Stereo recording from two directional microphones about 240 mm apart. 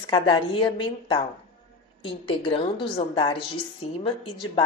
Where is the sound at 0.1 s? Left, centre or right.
Centre.